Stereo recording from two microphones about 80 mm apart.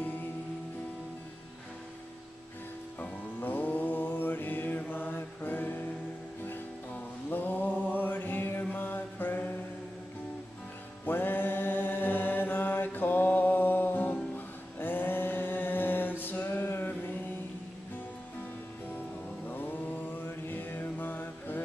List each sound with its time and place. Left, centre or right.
3.0 s music: left
8.0 s mantra: left
11.1 s mantra: left
19.4 s mantra: left